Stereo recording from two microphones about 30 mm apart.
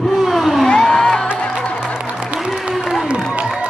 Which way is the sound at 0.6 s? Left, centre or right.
Left.